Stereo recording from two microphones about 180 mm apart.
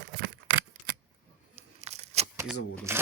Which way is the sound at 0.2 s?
85° right.